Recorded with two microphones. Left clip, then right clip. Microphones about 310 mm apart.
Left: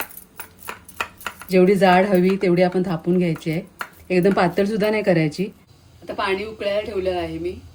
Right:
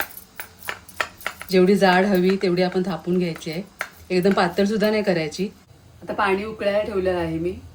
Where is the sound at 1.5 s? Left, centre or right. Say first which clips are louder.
Left 2 dB; left.